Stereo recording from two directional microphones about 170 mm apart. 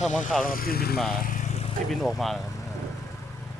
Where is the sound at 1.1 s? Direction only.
55° left (ahead or behind).